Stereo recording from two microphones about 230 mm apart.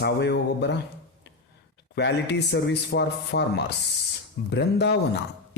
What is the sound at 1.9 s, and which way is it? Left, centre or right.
Speech, left.